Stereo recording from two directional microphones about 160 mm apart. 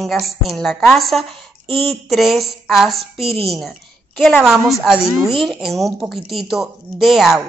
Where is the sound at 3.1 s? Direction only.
35° right (ahead or behind).